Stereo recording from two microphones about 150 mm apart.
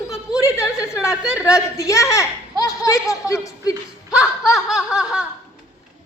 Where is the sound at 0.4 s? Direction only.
20° left (ahead or behind).